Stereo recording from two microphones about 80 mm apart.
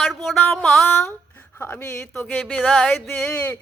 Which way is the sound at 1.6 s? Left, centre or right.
Left.